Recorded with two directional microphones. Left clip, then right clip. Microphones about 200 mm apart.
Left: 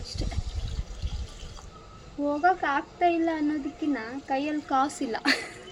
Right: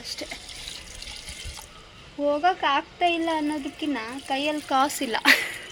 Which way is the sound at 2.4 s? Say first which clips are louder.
Even; 5° right (ahead or behind).